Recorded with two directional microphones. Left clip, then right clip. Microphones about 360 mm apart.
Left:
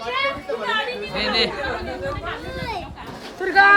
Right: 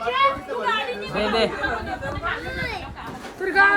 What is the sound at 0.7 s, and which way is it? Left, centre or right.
Chatter, centre.